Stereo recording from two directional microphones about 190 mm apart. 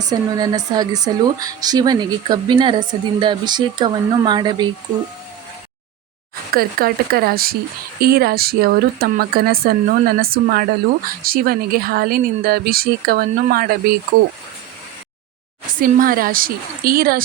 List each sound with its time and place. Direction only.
0.0 s a woman's voice: 20° right (ahead or behind)
6.5 s speech: 50° right (ahead or behind)
15.7 s speech: 45° right (ahead or behind)